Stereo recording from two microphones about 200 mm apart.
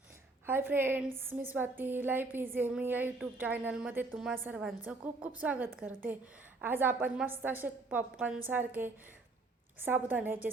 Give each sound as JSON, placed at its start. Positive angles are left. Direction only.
{"t": 0.4, "sound": "a woman's voice", "side_deg": -10}